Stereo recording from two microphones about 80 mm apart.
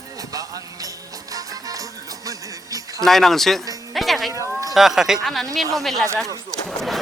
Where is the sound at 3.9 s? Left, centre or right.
Centre.